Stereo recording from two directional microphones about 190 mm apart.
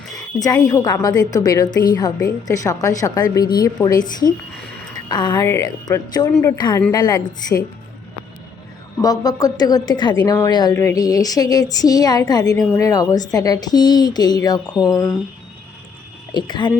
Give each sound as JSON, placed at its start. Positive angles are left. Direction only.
{"t": 0.3, "sound": "a woman's voice", "side_deg": 20}
{"t": 9.0, "sound": "a woman's voice", "side_deg": 20}
{"t": 16.3, "sound": "a woman's voice", "side_deg": 25}